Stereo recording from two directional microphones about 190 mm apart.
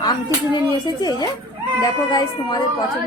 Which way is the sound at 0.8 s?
20° left (ahead or behind).